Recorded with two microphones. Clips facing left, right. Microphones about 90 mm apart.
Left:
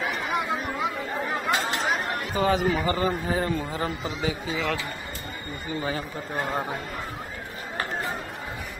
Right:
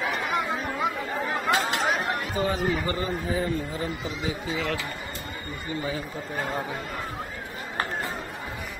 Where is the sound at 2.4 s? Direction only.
90° left.